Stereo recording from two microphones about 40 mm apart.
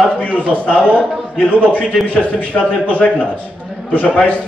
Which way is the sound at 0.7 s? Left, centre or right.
Right.